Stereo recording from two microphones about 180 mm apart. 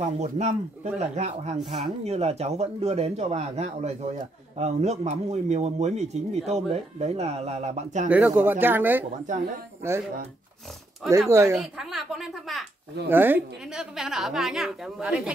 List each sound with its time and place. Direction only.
0.2 s speech: 40° right (ahead or behind)
8.4 s speech: 10° right (ahead or behind)
11.1 s speech: 15° right (ahead or behind)
11.5 s a woman's voice: centre (ahead or behind)
13.1 s a woman's voice: 10° right (ahead or behind)